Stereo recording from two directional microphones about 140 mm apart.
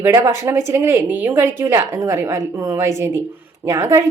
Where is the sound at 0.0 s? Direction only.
20° right (ahead or behind).